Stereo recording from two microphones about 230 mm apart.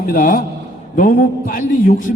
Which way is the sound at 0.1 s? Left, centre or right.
Left.